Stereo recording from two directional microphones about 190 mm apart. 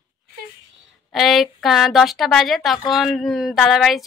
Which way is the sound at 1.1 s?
Centre (ahead or behind).